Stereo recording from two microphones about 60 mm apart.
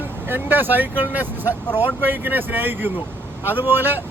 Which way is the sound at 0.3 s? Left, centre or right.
Right.